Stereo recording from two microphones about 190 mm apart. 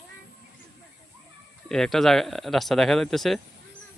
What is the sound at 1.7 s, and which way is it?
Speech, centre (ahead or behind).